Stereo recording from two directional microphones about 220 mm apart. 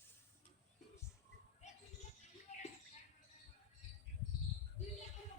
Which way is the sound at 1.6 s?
30° left (ahead or behind).